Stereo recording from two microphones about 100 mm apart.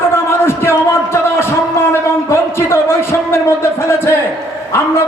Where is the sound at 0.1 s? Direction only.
25° left (ahead or behind).